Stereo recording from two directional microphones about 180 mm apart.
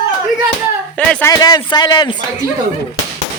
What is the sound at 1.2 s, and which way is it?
Speech, 20° left (ahead or behind).